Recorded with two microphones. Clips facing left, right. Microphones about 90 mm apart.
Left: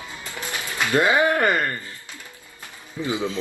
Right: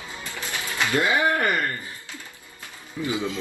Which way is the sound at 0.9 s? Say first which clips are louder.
Left 3 dB; 20° left (ahead or behind).